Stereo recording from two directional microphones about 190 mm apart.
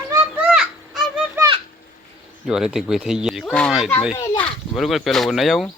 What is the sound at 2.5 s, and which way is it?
Speech, 5° right (ahead or behind).